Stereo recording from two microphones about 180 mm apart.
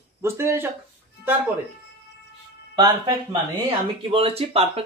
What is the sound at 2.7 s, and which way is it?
Speech, 25° right (ahead or behind).